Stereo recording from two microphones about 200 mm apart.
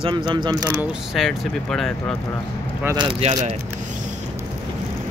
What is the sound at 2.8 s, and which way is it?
Speech, 15° right (ahead or behind).